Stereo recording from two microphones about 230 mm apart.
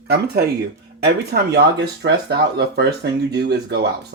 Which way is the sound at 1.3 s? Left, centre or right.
Right.